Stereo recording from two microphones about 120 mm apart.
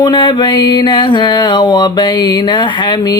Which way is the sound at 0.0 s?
40° left (ahead or behind).